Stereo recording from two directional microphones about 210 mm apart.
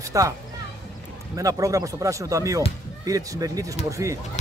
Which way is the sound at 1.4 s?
15° right (ahead or behind).